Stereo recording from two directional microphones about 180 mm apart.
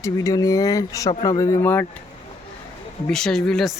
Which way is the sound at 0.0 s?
15° left (ahead or behind).